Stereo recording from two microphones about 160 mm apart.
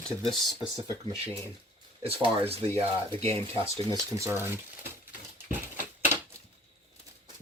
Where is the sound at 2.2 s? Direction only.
35° right (ahead or behind).